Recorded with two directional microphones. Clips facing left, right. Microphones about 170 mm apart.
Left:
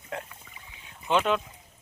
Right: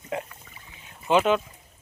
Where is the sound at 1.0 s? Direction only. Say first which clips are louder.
Right 4 dB; 5° right (ahead or behind).